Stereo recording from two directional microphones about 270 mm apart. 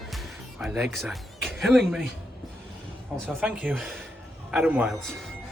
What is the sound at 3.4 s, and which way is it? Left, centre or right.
A man's voice, centre.